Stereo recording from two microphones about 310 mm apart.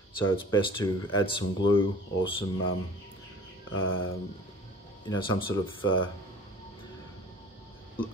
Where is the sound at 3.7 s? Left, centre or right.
Left.